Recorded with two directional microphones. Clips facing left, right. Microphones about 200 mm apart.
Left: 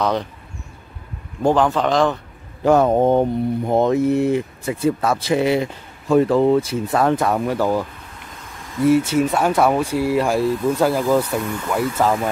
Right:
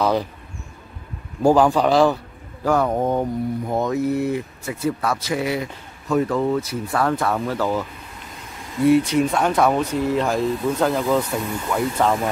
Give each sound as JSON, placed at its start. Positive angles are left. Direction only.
{"t": 0.0, "sound": "speech", "side_deg": -5}
{"t": 1.4, "sound": "a man's voice", "side_deg": -10}
{"t": 2.6, "sound": "speech", "side_deg": 25}
{"t": 8.8, "sound": "speech", "side_deg": 5}